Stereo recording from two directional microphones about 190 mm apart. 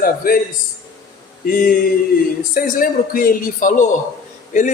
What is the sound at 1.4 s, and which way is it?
A man's voice, 50° left (ahead or behind).